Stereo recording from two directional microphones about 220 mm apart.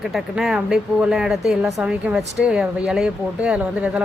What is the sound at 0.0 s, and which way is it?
Speech, centre (ahead or behind).